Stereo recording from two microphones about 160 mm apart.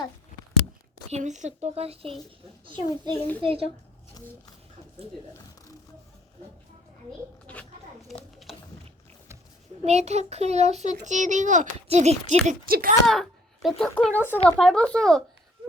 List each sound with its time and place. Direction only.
1.1 s a child's voice: 50° right (ahead or behind)
4.2 s speech: 25° left (ahead or behind)
8.0 s a sound: centre (ahead or behind)
9.8 s a child's voice: 45° right (ahead or behind)
12.5 s speech: 65° right (ahead or behind)
13.1 s speech: centre (ahead or behind)